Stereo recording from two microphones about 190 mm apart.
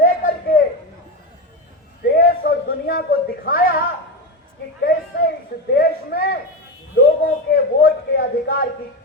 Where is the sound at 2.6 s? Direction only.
55° left (ahead or behind).